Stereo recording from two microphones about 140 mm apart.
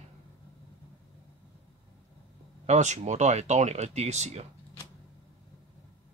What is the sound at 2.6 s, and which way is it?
Speech, 55° right (ahead or behind).